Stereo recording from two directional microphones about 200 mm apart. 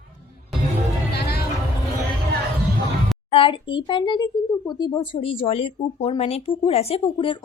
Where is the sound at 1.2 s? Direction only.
50° left (ahead or behind).